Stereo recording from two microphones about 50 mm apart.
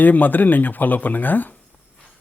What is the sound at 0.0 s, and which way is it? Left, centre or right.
Speech, left.